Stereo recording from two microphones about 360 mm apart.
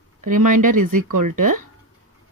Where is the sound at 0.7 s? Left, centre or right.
Right.